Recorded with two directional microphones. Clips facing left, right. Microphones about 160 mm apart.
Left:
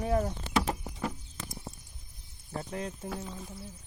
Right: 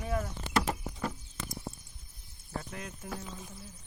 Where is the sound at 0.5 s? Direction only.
5° left (ahead or behind).